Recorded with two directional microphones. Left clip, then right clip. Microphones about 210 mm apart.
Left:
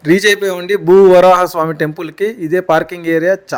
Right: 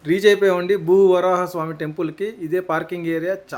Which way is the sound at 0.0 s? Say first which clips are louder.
Left 4 dB; 35° left (ahead or behind).